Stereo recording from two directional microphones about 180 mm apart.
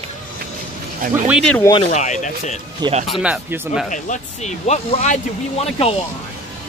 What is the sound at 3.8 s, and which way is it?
Speech, 45° left (ahead or behind).